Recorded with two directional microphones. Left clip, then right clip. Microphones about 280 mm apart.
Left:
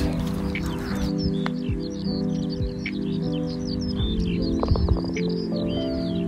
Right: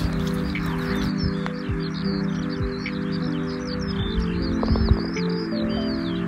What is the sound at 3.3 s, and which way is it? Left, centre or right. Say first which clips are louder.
Music: right 1 dB; left.